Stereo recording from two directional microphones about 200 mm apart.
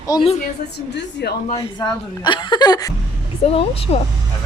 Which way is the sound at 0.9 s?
55° left (ahead or behind).